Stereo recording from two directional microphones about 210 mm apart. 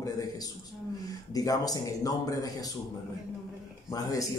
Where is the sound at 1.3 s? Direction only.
15° left (ahead or behind).